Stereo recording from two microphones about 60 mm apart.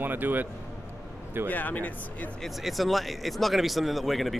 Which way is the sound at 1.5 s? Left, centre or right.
Left.